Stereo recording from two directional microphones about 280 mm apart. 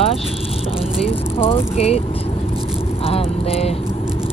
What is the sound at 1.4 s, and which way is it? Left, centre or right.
Speech, left.